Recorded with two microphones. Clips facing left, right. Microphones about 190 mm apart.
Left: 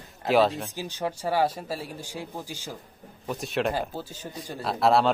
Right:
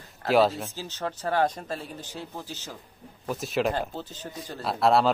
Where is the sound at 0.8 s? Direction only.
15° left (ahead or behind).